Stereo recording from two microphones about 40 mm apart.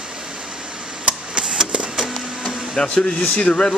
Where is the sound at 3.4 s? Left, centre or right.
Left.